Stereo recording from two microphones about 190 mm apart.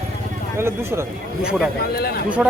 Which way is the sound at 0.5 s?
15° right (ahead or behind).